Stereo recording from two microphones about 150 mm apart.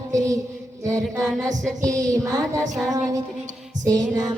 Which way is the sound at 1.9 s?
55° right (ahead or behind).